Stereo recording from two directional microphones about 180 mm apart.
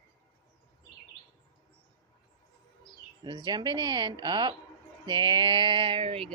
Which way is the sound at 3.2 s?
25° right (ahead or behind).